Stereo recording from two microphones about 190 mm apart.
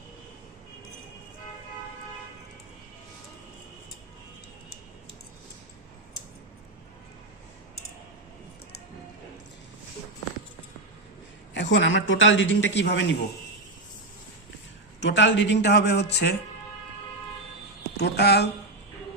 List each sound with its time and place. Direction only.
11.5 s a man's voice: 75° left (ahead or behind)
15.0 s a man's voice: 70° left (ahead or behind)
17.9 s speech: 60° left (ahead or behind)